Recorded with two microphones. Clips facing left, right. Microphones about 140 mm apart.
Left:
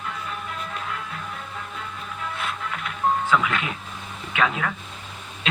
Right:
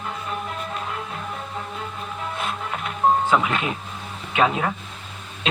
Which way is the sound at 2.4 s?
30° right (ahead or behind).